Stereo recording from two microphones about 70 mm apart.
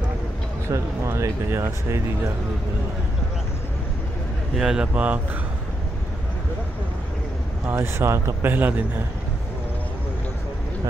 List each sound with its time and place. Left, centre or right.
0.7 s speech: right
4.6 s speech: centre
4.9 s speech: right
7.7 s speech: right